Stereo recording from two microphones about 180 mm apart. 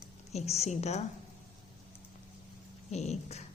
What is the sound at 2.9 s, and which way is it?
Speech, 35° left (ahead or behind).